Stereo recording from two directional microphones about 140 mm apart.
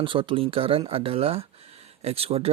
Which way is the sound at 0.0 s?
35° right (ahead or behind).